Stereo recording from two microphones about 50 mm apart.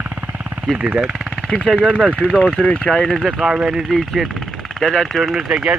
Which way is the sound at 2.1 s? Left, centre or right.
Left.